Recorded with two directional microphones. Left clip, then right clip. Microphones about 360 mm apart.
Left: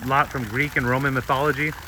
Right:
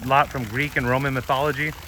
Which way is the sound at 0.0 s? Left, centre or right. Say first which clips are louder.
Right 2 dB; centre.